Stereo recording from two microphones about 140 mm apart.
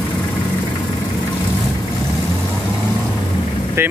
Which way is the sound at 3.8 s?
15° right (ahead or behind).